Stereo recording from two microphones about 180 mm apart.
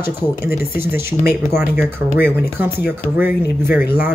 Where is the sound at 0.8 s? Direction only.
15° right (ahead or behind).